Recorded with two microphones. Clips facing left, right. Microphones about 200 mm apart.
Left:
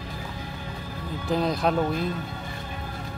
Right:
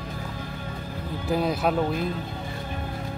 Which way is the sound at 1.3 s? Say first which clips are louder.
Even; 5° right (ahead or behind).